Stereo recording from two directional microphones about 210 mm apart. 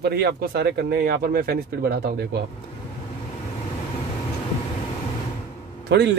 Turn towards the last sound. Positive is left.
turn(degrees=-55)  # may be behind; listen again after turning